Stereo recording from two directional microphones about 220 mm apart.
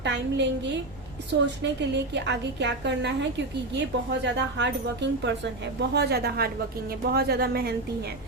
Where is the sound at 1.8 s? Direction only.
50° right (ahead or behind).